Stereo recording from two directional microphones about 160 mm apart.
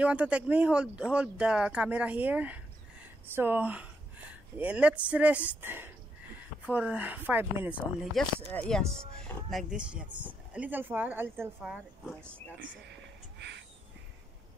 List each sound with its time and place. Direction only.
0.0 s speech: 10° right (ahead or behind)
8.1 s speech: 5° left (ahead or behind)
13.4 s a sound: 90° right